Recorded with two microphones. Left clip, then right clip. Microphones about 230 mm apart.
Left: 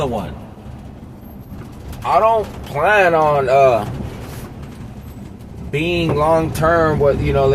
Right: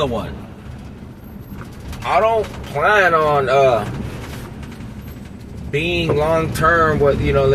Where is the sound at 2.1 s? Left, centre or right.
Left.